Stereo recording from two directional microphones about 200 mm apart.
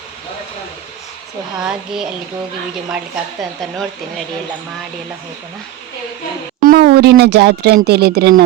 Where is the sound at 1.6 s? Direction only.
5° right (ahead or behind).